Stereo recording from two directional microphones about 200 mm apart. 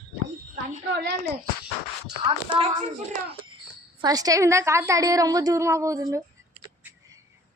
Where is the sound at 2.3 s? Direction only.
25° right (ahead or behind).